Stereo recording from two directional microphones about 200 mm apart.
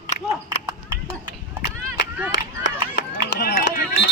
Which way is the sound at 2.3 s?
65° left (ahead or behind).